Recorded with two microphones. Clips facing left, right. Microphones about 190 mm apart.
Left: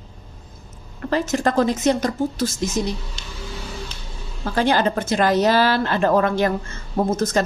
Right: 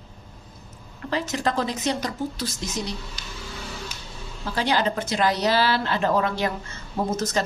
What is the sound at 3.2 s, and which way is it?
Music, 25° left (ahead or behind).